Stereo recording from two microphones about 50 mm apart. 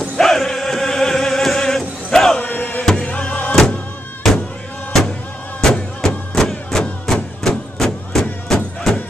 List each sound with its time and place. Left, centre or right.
0.2 s music: centre
2.4 s music: left
4.9 s music: centre